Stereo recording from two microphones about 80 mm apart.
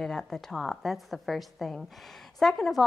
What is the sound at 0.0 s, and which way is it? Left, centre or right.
A woman's voice, centre.